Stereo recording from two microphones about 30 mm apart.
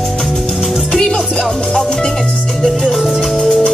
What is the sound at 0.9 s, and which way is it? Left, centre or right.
Music, left.